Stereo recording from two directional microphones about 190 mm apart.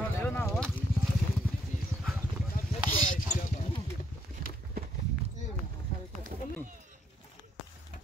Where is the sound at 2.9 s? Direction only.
45° left (ahead or behind).